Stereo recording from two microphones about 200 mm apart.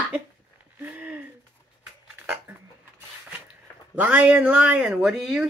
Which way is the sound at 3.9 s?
5° right (ahead or behind).